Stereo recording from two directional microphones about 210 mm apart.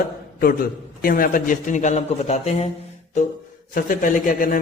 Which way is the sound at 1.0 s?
40° left (ahead or behind).